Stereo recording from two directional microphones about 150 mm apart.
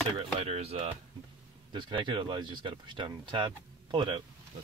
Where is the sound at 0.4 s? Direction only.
45° right (ahead or behind).